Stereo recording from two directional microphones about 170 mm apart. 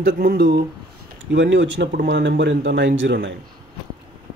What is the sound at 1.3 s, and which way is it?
Speech, 90° right.